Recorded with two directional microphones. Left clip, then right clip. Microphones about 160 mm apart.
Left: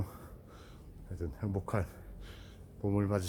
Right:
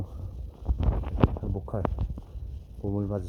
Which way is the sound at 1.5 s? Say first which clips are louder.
Even; 15° left (ahead or behind).